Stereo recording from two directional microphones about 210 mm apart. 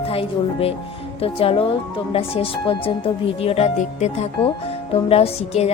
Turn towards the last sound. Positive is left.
turn(degrees=30)  # may be behind; listen again after turning